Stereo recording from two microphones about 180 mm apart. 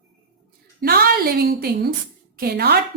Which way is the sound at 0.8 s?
55° right (ahead or behind).